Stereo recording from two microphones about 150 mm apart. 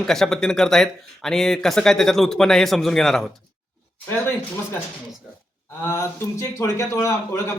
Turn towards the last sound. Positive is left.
turn(degrees=20)  # may be behind; listen again after turning